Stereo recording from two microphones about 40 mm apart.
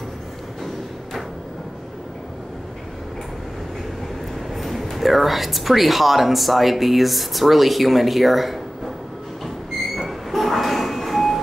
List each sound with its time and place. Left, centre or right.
4.6 s speech: centre
9.9 s sliding door: centre